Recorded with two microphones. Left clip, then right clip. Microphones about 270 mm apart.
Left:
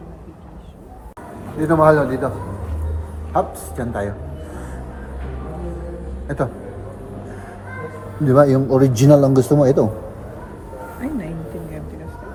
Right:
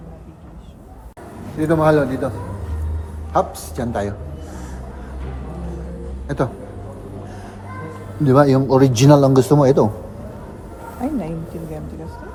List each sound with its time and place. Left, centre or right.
1.6 s a man's voice: centre
3.3 s a man's voice: centre
6.2 s a man's voice: centre
8.2 s a man's voice: centre
11.0 s speech: right